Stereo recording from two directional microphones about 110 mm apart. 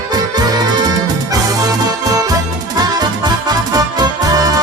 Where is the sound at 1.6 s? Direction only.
35° right (ahead or behind).